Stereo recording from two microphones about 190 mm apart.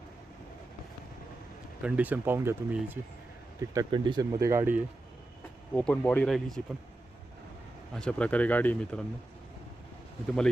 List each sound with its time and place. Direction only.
1.8 s speech: 10° right (ahead or behind)
3.6 s speech: 20° right (ahead or behind)
5.7 s speech: 5° left (ahead or behind)
7.9 s speech: 5° left (ahead or behind)